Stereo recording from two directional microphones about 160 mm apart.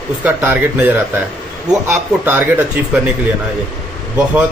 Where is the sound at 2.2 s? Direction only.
10° right (ahead or behind).